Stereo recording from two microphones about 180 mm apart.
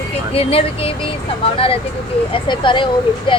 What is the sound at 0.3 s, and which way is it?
Speech, 30° left (ahead or behind).